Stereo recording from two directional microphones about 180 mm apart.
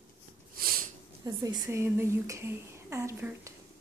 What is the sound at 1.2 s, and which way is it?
Speech, 20° right (ahead or behind).